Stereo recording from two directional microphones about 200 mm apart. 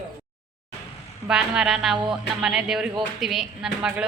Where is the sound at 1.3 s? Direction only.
5° right (ahead or behind).